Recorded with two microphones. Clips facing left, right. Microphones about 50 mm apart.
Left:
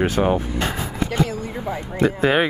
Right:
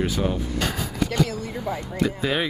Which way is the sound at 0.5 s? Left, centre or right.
Left.